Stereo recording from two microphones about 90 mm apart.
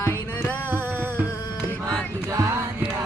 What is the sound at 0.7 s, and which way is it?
Music, 20° right (ahead or behind).